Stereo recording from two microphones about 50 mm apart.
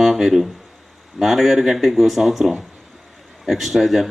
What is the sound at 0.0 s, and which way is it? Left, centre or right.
Speech, centre.